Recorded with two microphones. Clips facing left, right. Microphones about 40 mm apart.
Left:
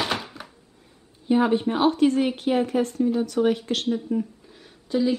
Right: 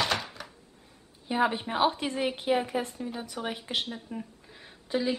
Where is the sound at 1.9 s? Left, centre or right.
Centre.